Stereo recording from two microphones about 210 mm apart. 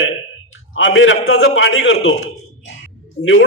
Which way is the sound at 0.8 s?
65° left (ahead or behind).